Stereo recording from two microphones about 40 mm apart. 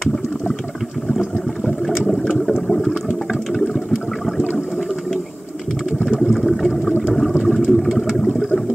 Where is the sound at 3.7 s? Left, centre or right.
Centre.